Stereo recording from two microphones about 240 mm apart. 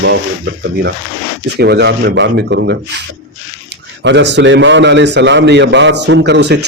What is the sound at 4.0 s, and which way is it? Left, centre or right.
A man's voice, right.